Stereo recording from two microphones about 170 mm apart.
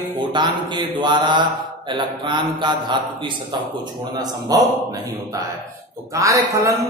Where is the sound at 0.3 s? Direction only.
25° right (ahead or behind).